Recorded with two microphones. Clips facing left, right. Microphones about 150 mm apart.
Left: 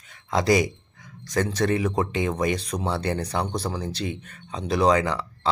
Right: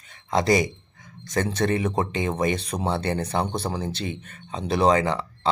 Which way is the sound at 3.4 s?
25° right (ahead or behind).